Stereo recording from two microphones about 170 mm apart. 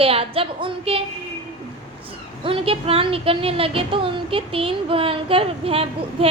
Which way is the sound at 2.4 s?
30° right (ahead or behind).